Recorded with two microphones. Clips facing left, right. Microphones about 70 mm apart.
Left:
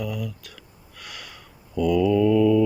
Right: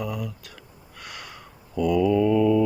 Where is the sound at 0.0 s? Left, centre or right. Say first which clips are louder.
Even; right.